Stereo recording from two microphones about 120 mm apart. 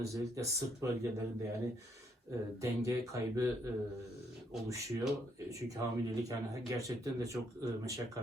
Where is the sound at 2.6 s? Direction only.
25° right (ahead or behind).